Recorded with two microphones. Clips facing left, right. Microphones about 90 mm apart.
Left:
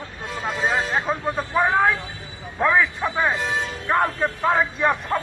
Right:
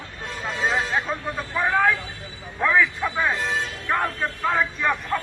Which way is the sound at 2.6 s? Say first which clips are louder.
Left 1 dB; 20° left (ahead or behind).